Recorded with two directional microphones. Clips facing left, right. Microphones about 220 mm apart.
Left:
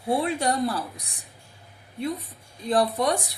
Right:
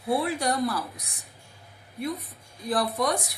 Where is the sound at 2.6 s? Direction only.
30° left (ahead or behind).